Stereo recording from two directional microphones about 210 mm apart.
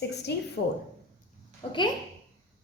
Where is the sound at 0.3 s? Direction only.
50° left (ahead or behind).